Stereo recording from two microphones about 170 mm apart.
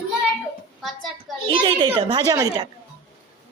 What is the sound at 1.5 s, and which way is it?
Speech, 25° right (ahead or behind).